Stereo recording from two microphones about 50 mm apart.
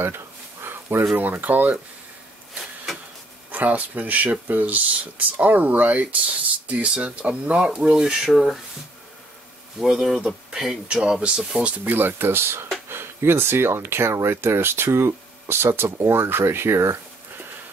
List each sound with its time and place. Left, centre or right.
0.0 s a sound: right
1.1 s speech: right
3.5 s speech: right; by 8.2 s centre
8.3 s speech: centre
9.8 s speech: centre
11.8 s speech: right